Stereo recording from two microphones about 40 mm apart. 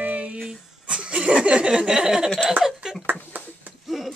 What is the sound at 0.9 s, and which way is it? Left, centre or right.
Laughter, right.